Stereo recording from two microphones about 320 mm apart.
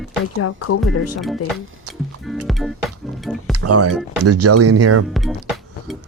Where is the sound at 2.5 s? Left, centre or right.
Centre.